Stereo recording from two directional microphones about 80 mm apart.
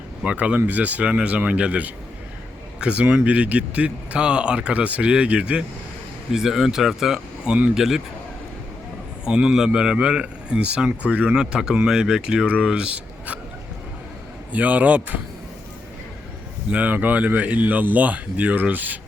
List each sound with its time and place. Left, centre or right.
0.3 s speech: centre
7.4 s speech: centre
7.8 s speech: centre
9.2 s speech: centre
14.5 s speech: centre
16.6 s speech: centre